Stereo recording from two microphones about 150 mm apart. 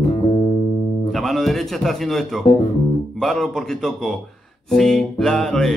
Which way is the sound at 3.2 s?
Centre (ahead or behind).